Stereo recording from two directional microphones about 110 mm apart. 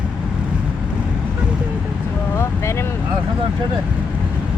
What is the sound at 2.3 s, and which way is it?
Vehicle, 25° left (ahead or behind).